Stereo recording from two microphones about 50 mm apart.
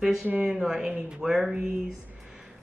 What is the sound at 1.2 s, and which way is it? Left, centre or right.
Speech, centre.